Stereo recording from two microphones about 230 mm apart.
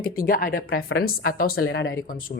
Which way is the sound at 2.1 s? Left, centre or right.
Left.